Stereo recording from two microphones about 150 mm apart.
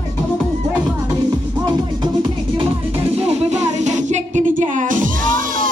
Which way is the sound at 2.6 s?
40° right (ahead or behind).